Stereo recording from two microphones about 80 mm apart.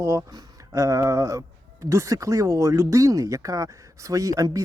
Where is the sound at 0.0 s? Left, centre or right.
Right.